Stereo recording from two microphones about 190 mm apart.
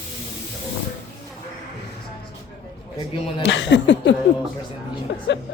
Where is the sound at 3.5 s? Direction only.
70° left (ahead or behind).